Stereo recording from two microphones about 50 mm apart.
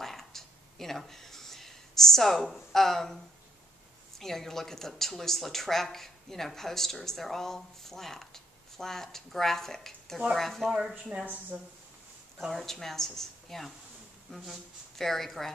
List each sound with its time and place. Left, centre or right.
0.0 s a sound: centre
4.2 s speech: centre
11.5 s speech: right
12.4 s speech: centre